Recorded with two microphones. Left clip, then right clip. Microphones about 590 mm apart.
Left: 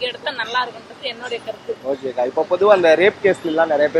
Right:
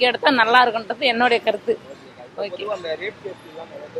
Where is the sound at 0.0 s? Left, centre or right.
Right.